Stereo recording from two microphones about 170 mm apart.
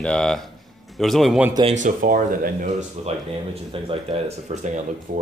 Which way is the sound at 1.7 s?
50° right (ahead or behind).